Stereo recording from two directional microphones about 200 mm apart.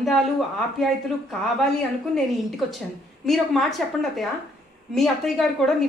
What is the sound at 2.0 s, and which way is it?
A woman's voice, centre (ahead or behind).